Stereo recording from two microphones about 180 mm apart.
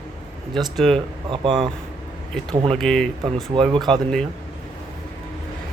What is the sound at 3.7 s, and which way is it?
Speech, 25° right (ahead or behind).